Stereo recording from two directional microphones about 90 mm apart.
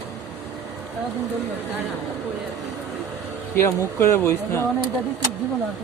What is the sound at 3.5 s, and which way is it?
Speech, 30° left (ahead or behind).